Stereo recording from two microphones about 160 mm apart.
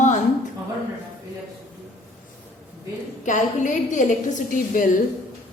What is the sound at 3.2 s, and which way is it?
A woman's voice, 50° left (ahead or behind).